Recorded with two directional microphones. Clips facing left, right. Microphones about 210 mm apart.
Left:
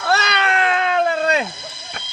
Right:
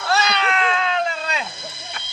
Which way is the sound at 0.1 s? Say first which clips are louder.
Left 1 dB; 60° left (ahead or behind).